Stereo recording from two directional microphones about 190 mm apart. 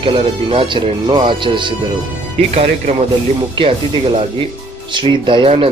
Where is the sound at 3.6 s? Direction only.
30° right (ahead or behind).